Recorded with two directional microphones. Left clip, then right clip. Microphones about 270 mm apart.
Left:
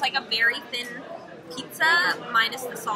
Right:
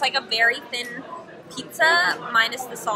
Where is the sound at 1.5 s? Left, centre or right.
Right.